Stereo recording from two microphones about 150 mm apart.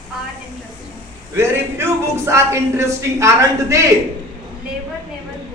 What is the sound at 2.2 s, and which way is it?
A man's voice, 20° right (ahead or behind).